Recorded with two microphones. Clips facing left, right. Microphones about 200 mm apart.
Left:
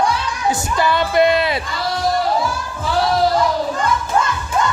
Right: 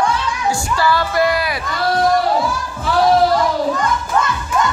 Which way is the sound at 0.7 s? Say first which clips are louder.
Left 2 dB; 20° left (ahead or behind).